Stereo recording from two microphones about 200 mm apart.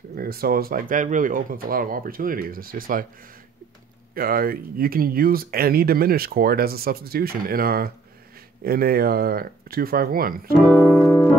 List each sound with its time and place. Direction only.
0.1 s speech: 50° right (ahead or behind)
4.1 s speech: 45° right (ahead or behind)
10.7 s music: 15° left (ahead or behind)